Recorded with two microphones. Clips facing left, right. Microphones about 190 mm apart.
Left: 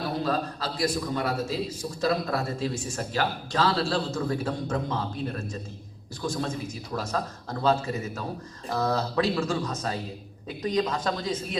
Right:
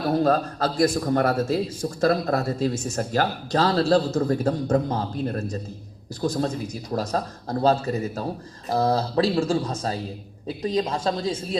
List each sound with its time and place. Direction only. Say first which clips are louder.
0.2 s a man's voice: right 7 dB; 45° right (ahead or behind); by 11.3 s 30° right (ahead or behind)